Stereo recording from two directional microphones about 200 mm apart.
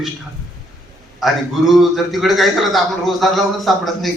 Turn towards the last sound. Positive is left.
turn(degrees=0)  # may be behind; listen again after turning